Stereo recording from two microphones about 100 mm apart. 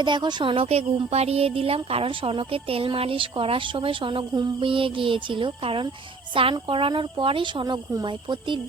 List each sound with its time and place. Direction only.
0.0 s speech: 50° right (ahead or behind)